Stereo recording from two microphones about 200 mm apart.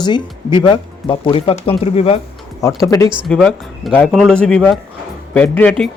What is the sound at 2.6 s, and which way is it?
Speech, 15° left (ahead or behind).